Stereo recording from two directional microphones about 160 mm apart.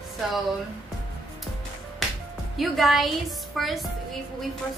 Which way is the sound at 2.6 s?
Centre (ahead or behind).